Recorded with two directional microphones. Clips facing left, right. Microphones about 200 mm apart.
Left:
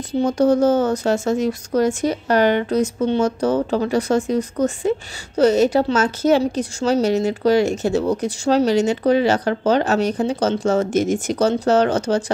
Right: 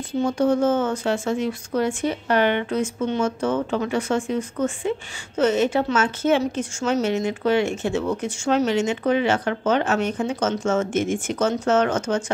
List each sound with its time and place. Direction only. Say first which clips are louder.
0.2 s speech: left 4 dB; 40° left (ahead or behind)